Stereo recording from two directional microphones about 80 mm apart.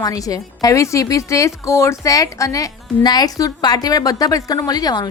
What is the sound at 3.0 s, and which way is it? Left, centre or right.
A woman's voice, left.